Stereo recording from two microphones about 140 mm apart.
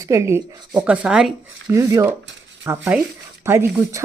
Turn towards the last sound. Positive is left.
turn(degrees=-20)  # may be behind; listen again after turning